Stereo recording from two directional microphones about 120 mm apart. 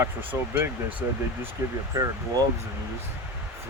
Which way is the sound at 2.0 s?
30° right (ahead or behind).